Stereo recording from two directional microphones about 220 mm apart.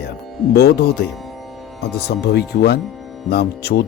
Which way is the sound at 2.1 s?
45° left (ahead or behind).